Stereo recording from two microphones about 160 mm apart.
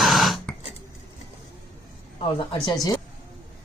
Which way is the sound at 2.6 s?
25° left (ahead or behind).